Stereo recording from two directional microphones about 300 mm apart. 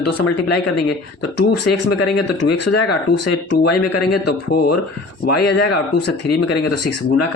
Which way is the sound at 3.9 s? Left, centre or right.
Left.